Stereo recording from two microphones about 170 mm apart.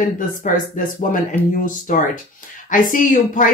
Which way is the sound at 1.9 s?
50° left (ahead or behind).